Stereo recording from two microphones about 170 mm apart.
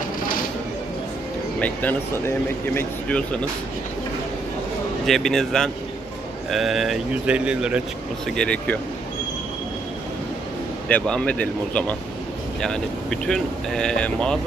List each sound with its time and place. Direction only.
1.6 s speech: 10° left (ahead or behind)
5.0 s speech: centre (ahead or behind)
8.4 s speech: 5° left (ahead or behind)
10.8 s speech: 5° left (ahead or behind)